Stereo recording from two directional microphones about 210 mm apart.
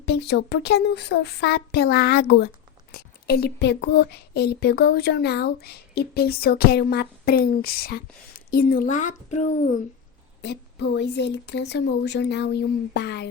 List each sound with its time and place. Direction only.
0.0 s speech: 50° left (ahead or behind); by 9.8 s 35° left (ahead or behind)
10.4 s speech: 55° left (ahead or behind)